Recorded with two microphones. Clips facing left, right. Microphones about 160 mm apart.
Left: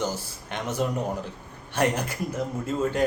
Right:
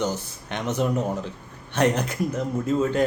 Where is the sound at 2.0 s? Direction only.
55° right (ahead or behind).